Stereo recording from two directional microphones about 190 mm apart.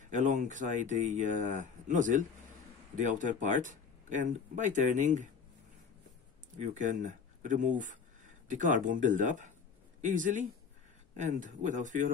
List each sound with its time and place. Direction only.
0.0 s speech: 40° right (ahead or behind)
6.6 s speech: 40° right (ahead or behind)